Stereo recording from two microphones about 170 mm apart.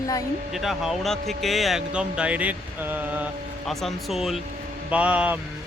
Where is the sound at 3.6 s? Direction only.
Centre (ahead or behind).